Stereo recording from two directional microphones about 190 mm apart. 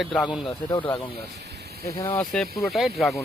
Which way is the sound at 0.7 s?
20° left (ahead or behind).